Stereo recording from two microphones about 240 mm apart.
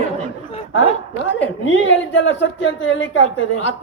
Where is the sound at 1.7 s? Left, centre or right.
Left.